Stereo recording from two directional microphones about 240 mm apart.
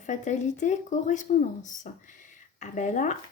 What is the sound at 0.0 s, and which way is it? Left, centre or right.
Speech, left.